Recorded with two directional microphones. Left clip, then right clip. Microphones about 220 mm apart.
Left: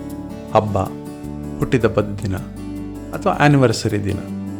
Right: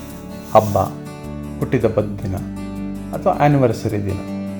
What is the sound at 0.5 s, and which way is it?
Speech, 25° left (ahead or behind).